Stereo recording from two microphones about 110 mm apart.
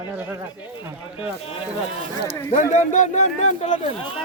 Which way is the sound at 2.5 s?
90° left.